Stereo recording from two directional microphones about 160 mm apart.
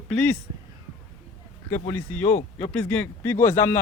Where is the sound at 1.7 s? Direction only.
15° left (ahead or behind).